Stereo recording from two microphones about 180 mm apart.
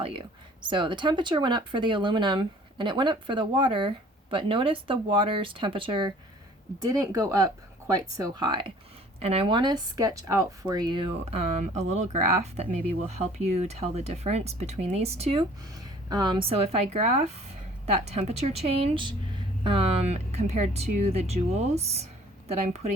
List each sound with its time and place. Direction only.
0.0 s speech: 30° right (ahead or behind)
16.0 s speech: 25° right (ahead or behind)